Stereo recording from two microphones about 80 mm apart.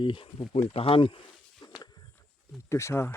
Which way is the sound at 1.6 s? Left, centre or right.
Left.